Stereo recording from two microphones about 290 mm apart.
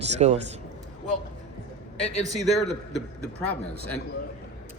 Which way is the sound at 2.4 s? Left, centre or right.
Centre.